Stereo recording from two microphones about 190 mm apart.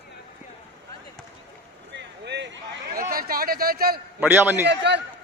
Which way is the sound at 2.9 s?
50° right (ahead or behind).